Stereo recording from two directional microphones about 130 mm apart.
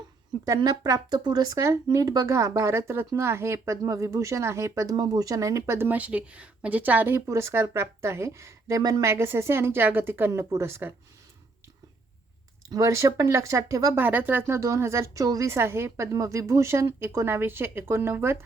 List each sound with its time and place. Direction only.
0.4 s speech: 25° right (ahead or behind)
12.7 s speech: 25° right (ahead or behind)